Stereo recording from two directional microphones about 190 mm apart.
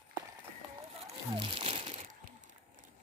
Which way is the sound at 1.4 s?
30° right (ahead or behind).